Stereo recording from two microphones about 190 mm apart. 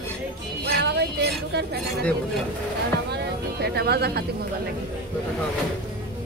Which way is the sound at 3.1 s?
60° right (ahead or behind).